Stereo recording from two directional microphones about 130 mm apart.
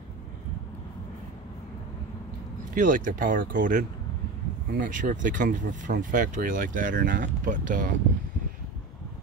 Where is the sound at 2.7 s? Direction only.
90° right.